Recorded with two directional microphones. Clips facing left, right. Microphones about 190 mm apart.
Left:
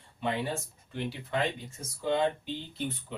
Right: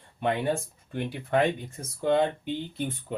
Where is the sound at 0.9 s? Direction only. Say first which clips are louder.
Right 6 dB; 55° right (ahead or behind).